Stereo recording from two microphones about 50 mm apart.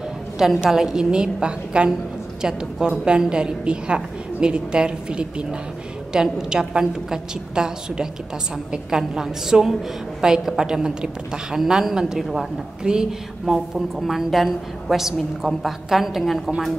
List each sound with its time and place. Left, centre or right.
0.4 s a woman's voice: centre